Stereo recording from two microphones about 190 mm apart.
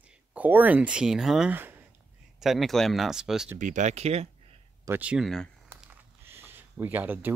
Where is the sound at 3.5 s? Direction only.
40° right (ahead or behind).